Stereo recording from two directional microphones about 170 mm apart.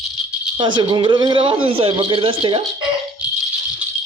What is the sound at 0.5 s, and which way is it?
A man's voice, 25° right (ahead or behind).